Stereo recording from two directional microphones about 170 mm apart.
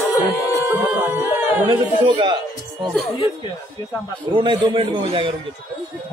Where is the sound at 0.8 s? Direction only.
10° right (ahead or behind).